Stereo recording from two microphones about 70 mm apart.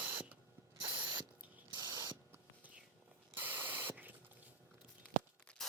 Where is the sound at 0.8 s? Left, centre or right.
Right.